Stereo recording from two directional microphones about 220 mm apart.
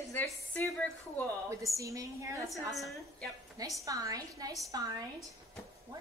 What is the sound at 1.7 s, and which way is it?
Speech, 15° right (ahead or behind).